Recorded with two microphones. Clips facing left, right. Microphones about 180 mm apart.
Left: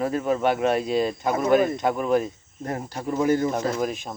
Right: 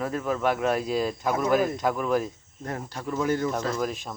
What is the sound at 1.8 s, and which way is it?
Speech, 25° left (ahead or behind).